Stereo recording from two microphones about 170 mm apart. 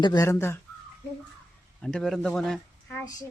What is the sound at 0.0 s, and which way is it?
Speech, 20° left (ahead or behind).